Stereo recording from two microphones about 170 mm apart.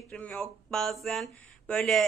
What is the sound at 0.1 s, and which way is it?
A woman's voice, 5° left (ahead or behind).